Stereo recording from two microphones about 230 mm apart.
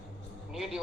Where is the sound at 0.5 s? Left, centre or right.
Centre.